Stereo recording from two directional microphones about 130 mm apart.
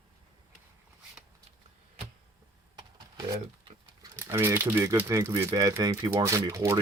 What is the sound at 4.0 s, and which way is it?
Speech, 20° right (ahead or behind).